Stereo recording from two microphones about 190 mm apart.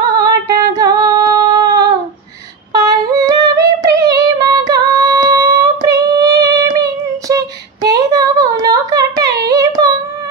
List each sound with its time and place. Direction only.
0.0 s female singing: 20° right (ahead or behind)
2.7 s yodeling: 20° right (ahead or behind)
3.9 s female singing: 20° right (ahead or behind)
4.8 s child singing: 20° right (ahead or behind)
7.9 s a sound: 20° right (ahead or behind)